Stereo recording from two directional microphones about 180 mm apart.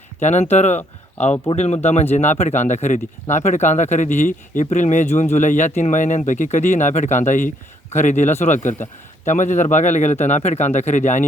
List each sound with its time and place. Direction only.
0.2 s speech: 40° left (ahead or behind)